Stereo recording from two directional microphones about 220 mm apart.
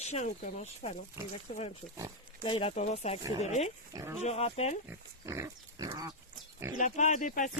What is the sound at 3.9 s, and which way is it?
Speech, 10° right (ahead or behind).